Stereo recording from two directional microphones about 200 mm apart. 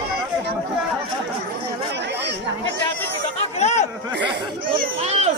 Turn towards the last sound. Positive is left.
turn(degrees=-30)  # may be behind; listen again after turning